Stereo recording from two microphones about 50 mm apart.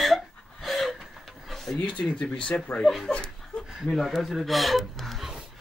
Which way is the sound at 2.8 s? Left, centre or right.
Centre.